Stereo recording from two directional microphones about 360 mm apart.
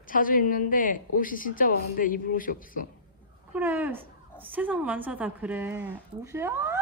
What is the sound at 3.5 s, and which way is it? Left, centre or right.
A woman's voice, centre.